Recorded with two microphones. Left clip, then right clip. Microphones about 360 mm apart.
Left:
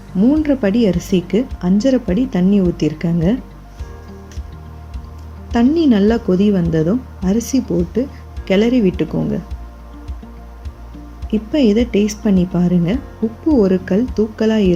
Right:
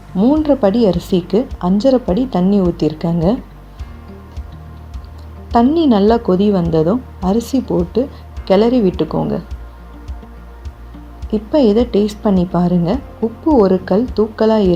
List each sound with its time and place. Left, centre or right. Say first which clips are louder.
0.2 s a woman's voice: right 3 dB; right
5.5 s a woman's voice: right 2 dB; right
11.3 s a woman's voice: right 3 dB; right